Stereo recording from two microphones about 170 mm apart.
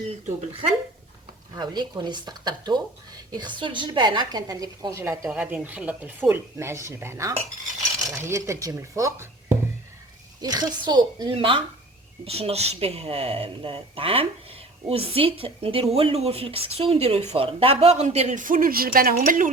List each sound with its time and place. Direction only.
1.5 s a woman's voice: 25° right (ahead or behind); by 19.5 s 50° right (ahead or behind)